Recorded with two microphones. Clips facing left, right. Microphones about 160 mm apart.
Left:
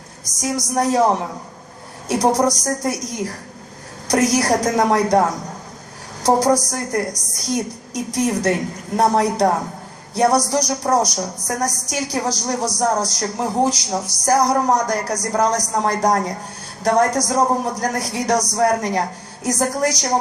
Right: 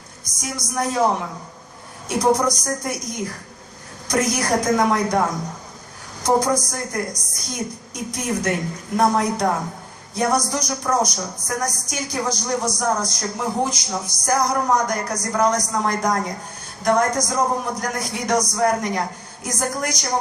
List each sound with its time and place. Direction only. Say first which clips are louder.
0.3 s speech: left 6 dB; 40° left (ahead or behind)
4.1 s speech: left 4 dB; 40° left (ahead or behind)
6.2 s speech: left 3 dB; 35° left (ahead or behind)